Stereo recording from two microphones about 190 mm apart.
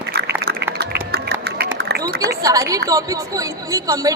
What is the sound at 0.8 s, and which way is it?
Run, 55° right (ahead or behind).